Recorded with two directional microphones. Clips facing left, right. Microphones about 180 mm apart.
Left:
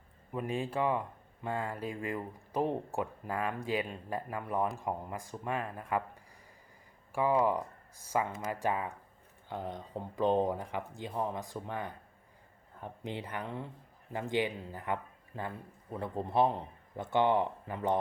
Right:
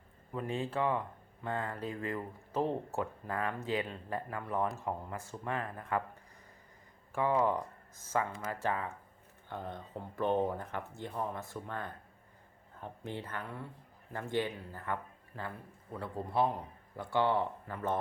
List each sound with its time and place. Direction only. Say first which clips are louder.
0.3 s speech: left 1 dB; 15° left (ahead or behind)
7.1 s a man's voice: left 2 dB; 10° left (ahead or behind)